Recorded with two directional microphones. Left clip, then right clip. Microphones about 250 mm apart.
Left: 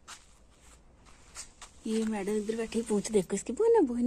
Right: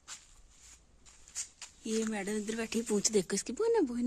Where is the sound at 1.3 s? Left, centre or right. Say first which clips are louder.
Right 4 dB; left.